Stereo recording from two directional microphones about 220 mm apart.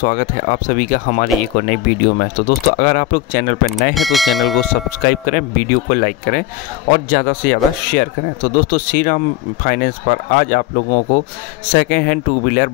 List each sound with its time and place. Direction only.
0.0 s speech: 40° left (ahead or behind)
3.9 s speech: centre (ahead or behind)
5.0 s speech: 40° left (ahead or behind)